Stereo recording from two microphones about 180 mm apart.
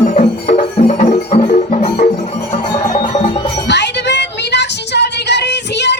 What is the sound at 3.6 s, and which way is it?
Music, 75° left (ahead or behind).